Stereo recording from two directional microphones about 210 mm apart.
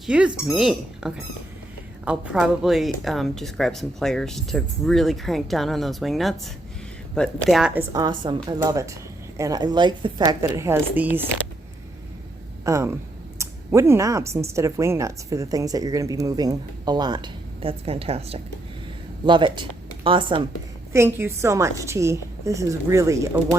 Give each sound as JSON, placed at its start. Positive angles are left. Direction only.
{"t": 0.0, "sound": "speech", "side_deg": -5}
{"t": 7.9, "sound": "a woman's voice", "side_deg": -20}
{"t": 12.6, "sound": "a woman's voice", "side_deg": -15}
{"t": 20.9, "sound": "a woman's voice", "side_deg": -10}